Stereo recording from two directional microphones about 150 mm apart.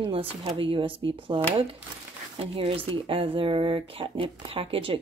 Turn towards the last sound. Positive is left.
turn(degrees=-40)  # may be behind; listen again after turning